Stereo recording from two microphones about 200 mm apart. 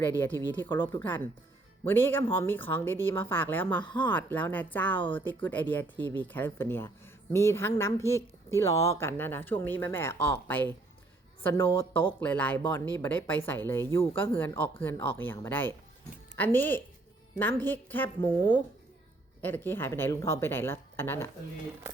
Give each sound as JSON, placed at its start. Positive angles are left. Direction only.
{"t": 0.2, "sound": "a woman's voice", "side_deg": 10}
{"t": 19.4, "sound": "a woman's voice", "side_deg": 10}